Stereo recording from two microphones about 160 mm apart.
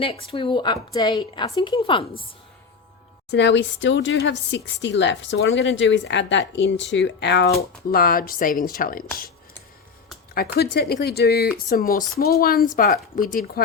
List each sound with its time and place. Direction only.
0.0 s a woman's voice: 35° left (ahead or behind)
3.2 s a woman's voice: 90° left
7.9 s speech: 65° left (ahead or behind)
10.3 s speech: 75° left (ahead or behind)
11.5 s speech: 65° left (ahead or behind)